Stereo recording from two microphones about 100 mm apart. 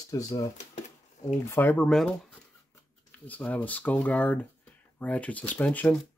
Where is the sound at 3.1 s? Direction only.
15° left (ahead or behind).